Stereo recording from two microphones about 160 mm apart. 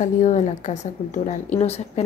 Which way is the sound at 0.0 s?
50° left (ahead or behind).